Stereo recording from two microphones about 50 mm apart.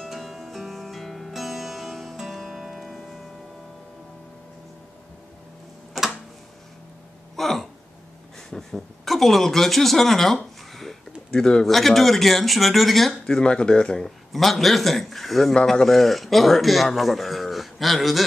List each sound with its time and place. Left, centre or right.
0.0 s music: centre
6.0 s tick-tock: centre
7.3 s a sound: centre
8.5 s speech: centre
13.4 s speech: centre
14.0 s a man's voice: centre